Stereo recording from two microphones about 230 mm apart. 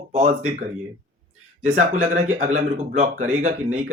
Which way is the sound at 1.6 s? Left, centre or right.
Right.